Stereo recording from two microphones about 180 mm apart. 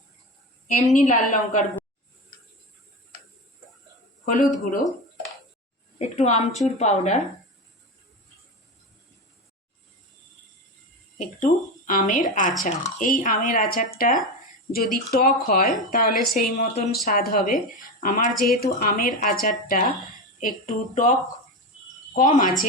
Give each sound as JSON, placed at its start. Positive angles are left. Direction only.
{"t": 0.9, "sound": "speech", "side_deg": 45}
{"t": 4.3, "sound": "speech", "side_deg": 50}
{"t": 6.0, "sound": "a woman's voice", "side_deg": 40}
{"t": 11.2, "sound": "speech", "side_deg": 45}